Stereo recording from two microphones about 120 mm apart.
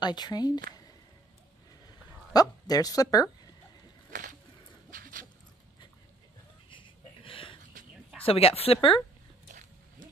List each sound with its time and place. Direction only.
0.0 s speech: 35° left (ahead or behind)
2.3 s speech: 30° left (ahead or behind)
4.1 s a sound: 90° right
6.7 s a sound: 45° left (ahead or behind)
8.2 s speech: 50° left (ahead or behind)
9.5 s music: 90° right